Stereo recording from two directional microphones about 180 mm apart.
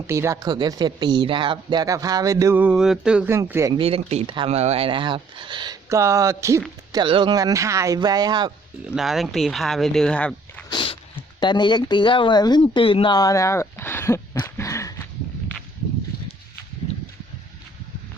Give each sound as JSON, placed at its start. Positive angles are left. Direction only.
{"t": 0.1, "sound": "speech", "side_deg": -15}
{"t": 3.8, "sound": "speech", "side_deg": -30}
{"t": 9.0, "sound": "speech", "side_deg": 0}
{"t": 10.7, "sound": "a sound", "side_deg": 30}
{"t": 11.3, "sound": "speech", "side_deg": 25}
{"t": 14.4, "sound": "a sound", "side_deg": 15}